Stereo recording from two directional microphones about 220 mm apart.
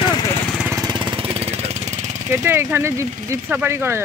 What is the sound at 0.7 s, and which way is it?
Jackhammer, 20° right (ahead or behind).